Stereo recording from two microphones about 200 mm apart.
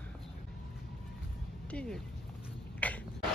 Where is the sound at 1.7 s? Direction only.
5° left (ahead or behind).